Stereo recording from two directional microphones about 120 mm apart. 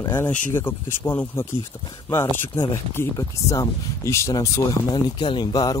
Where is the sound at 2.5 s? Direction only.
25° left (ahead or behind).